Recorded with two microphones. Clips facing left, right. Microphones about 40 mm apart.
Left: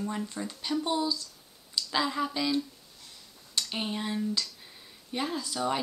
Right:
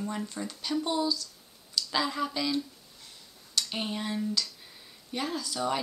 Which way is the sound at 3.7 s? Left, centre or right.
Centre.